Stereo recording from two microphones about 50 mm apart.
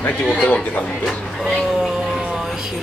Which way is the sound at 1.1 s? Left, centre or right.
Centre.